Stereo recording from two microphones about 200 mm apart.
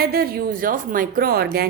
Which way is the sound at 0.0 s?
50° right (ahead or behind).